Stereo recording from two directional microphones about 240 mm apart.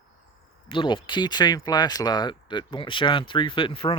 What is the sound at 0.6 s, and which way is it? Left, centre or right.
Speech, left.